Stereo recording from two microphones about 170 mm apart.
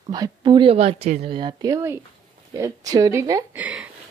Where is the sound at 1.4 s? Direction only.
25° right (ahead or behind).